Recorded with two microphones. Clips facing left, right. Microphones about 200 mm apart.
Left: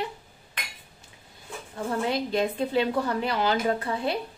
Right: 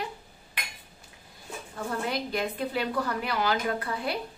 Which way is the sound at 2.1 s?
25° left (ahead or behind).